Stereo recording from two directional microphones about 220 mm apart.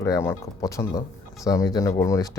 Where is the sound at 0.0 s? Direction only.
10° left (ahead or behind).